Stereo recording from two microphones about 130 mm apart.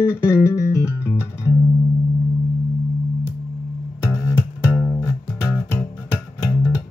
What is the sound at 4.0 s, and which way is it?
Music, 20° left (ahead or behind).